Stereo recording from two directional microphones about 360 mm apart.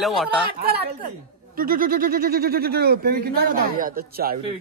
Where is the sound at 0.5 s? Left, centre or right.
Right.